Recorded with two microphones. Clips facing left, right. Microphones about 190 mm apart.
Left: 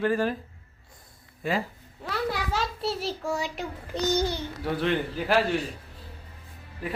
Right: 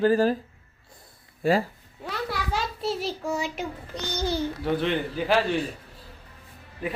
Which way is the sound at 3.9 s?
25° left (ahead or behind).